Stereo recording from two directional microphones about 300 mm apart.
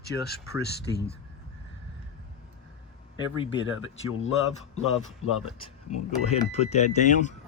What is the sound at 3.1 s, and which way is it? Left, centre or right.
Speech, centre.